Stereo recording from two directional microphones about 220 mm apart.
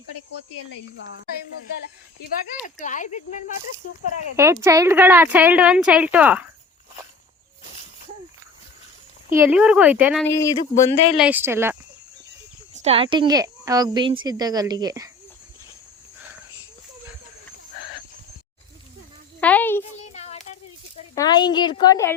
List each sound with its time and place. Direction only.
0.5 s speech: 55° left (ahead or behind)
2.8 s speech: 35° left (ahead or behind)
4.4 s speech: 10° right (ahead or behind)
9.3 s speech: 10° right (ahead or behind)
10.2 s speech: 15° left (ahead or behind)
11.2 s speech: 10° right (ahead or behind)
12.7 s speech: 30° right (ahead or behind)
19.4 s a child's voice: 5° left (ahead or behind)
20.0 s a sound: 30° left (ahead or behind)
21.2 s a woman's voice: 20° left (ahead or behind)